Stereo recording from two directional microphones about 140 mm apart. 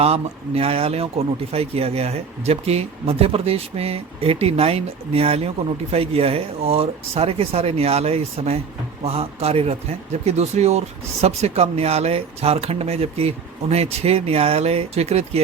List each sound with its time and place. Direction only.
0.0 s speech: 45° right (ahead or behind)